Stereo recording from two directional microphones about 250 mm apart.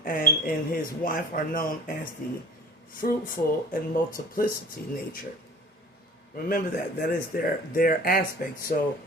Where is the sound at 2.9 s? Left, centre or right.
Left.